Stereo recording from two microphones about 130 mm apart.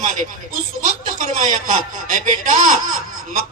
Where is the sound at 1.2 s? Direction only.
75° right (ahead or behind).